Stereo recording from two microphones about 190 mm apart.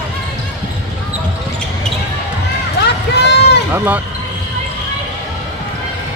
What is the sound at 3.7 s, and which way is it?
Speech, 10° right (ahead or behind).